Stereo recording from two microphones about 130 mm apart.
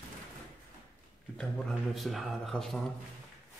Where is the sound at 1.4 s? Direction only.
Centre (ahead or behind).